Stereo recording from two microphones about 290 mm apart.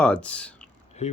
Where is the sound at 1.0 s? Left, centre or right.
Left.